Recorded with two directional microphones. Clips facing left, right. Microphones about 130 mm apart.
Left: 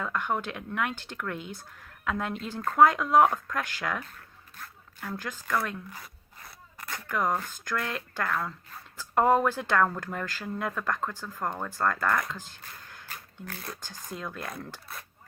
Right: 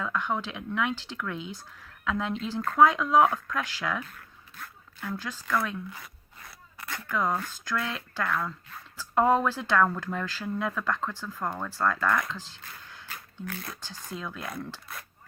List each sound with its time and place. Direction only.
0.0 s speech: 50° left (ahead or behind)
11.0 s speech: 15° left (ahead or behind)
11.7 s speech: 45° left (ahead or behind)